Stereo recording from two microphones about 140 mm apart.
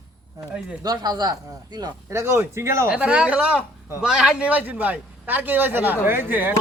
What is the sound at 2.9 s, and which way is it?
Speech, 10° right (ahead or behind).